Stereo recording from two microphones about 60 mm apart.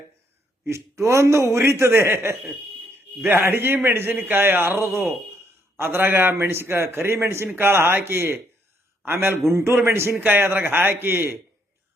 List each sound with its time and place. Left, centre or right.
1.0 s a man's voice: right
6.3 s a man's voice: right
10.2 s a man's voice: right
10.4 s a man's voice: right